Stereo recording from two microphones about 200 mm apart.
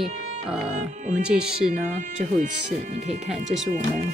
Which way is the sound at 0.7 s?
35° right (ahead or behind).